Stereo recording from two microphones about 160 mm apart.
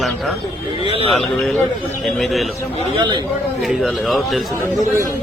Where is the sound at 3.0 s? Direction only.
30° right (ahead or behind).